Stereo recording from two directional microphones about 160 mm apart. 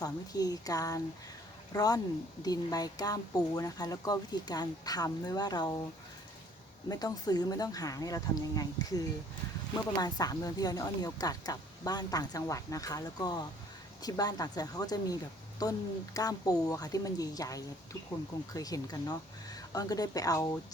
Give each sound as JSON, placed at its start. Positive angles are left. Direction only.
{"t": 0.0, "sound": "speech", "side_deg": 25}
{"t": 6.8, "sound": "speech", "side_deg": 25}